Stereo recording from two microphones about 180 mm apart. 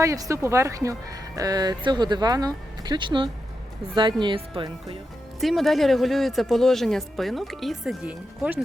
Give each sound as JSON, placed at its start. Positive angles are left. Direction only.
{"t": 0.0, "sound": "speech", "side_deg": -15}
{"t": 5.4, "sound": "speech", "side_deg": 0}